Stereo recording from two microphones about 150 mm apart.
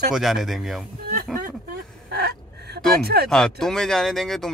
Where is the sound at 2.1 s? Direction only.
90° right.